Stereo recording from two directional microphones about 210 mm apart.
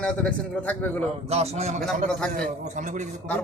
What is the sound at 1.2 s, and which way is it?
Speech, 30° right (ahead or behind).